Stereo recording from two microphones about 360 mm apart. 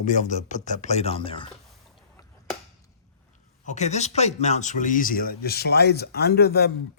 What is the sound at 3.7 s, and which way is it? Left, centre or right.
Speech, centre.